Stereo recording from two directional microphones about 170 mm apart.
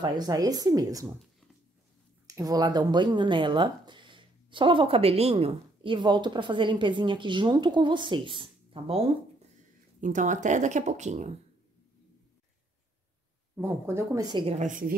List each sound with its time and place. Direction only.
0.0 s speech: 25° right (ahead or behind)
2.2 s speech: 20° right (ahead or behind)
9.9 s speech: 50° right (ahead or behind)
13.6 s speech: 15° right (ahead or behind); by 14.7 s 35° right (ahead or behind)
14.7 s speech: 55° right (ahead or behind)